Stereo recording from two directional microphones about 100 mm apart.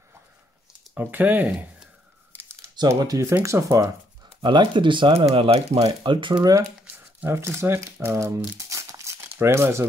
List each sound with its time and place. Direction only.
0.9 s speech: 20° right (ahead or behind)
3.0 s speech: 35° right (ahead or behind)
4.4 s speech: 50° right (ahead or behind); by 5.8 s 70° right (ahead or behind)
5.8 s speech: 50° right (ahead or behind)
6.9 s crumpling: 20° right (ahead or behind)
9.2 s speech: 25° right (ahead or behind)